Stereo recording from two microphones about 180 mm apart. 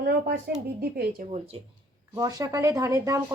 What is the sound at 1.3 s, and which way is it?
Speech, 35° right (ahead or behind).